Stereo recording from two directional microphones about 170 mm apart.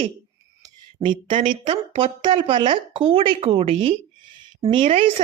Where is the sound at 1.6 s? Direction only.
30° right (ahead or behind).